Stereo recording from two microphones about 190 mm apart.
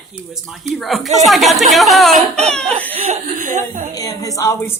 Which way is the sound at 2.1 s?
35° right (ahead or behind).